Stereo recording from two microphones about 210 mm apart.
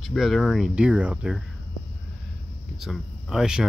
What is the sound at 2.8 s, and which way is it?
Speech, centre (ahead or behind).